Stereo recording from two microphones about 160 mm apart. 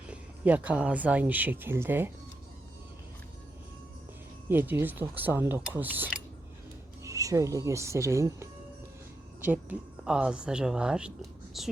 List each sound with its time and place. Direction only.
0.1 s speech: 10° right (ahead or behind)
4.4 s speech: 10° right (ahead or behind)